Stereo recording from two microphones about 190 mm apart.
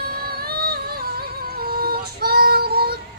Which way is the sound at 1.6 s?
50° right (ahead or behind).